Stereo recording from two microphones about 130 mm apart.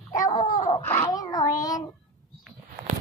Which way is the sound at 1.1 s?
30° left (ahead or behind).